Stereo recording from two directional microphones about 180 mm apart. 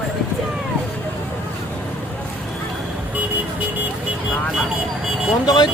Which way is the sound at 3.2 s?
10° right (ahead or behind).